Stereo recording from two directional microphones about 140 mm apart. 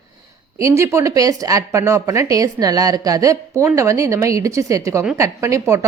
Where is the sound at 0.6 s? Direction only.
20° right (ahead or behind).